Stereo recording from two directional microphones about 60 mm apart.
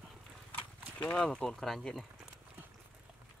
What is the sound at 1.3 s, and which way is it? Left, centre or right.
Speech, centre.